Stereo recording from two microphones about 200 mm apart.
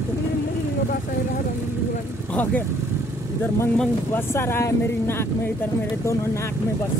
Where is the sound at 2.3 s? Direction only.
10° left (ahead or behind).